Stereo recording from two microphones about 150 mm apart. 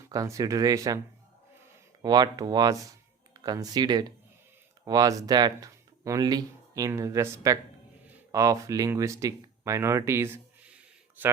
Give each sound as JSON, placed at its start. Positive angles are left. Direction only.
{"t": 0.1, "sound": "speech", "side_deg": -20}
{"t": 2.0, "sound": "speech", "side_deg": -30}